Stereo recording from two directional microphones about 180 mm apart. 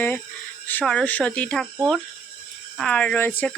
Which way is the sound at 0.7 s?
10° left (ahead or behind).